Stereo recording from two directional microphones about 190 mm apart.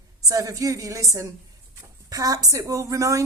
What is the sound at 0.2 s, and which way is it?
A woman's voice, 20° right (ahead or behind).